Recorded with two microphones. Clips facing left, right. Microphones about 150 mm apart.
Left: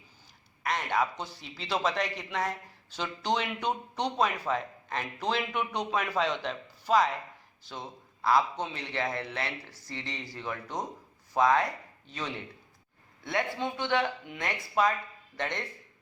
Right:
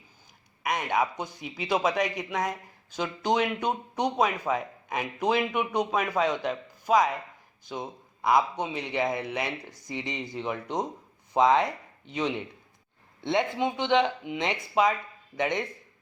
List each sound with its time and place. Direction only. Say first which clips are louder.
0.6 s a man's voice: right 2 dB; 15° right (ahead or behind)